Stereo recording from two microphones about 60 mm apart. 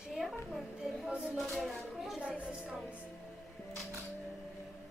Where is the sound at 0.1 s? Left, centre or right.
Centre.